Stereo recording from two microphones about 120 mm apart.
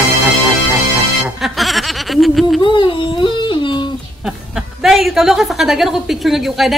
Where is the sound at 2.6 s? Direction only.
45° left (ahead or behind).